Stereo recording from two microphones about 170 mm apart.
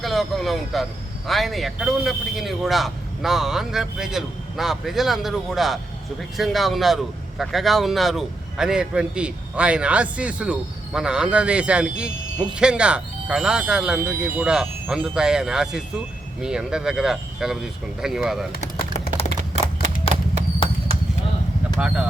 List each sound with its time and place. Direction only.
0.0 s speech: centre (ahead or behind)
20.1 s a sound: 35° left (ahead or behind)
21.8 s speech: 5° right (ahead or behind)